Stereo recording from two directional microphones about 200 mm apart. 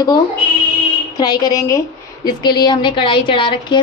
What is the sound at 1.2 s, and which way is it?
A woman's voice, 20° left (ahead or behind).